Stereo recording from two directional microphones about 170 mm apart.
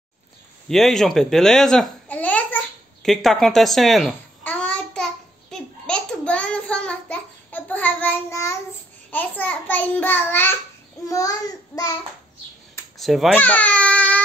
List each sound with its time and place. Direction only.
0.7 s babbling: centre (ahead or behind); by 8.5 s 15° left (ahead or behind)
9.1 s a child's voice: 10° left (ahead or behind)
11.1 s child singing: 20° left (ahead or behind)
12.9 s babbling: centre (ahead or behind)